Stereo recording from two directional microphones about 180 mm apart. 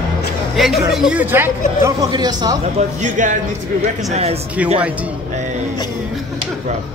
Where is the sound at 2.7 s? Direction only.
45° right (ahead or behind).